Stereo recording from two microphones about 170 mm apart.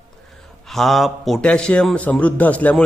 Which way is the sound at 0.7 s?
Centre (ahead or behind).